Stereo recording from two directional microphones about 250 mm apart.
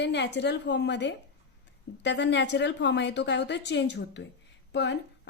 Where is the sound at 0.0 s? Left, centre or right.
Left.